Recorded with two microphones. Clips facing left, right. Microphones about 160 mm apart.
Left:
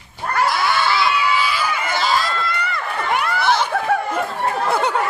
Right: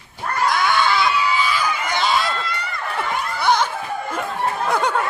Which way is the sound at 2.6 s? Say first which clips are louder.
Left 2 dB; 75° left (ahead or behind).